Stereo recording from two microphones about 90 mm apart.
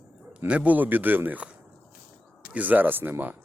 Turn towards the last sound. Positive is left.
turn(degrees=-20)  # may be behind; listen again after turning